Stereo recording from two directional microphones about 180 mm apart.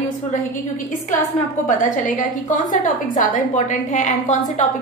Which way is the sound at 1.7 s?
45° left (ahead or behind).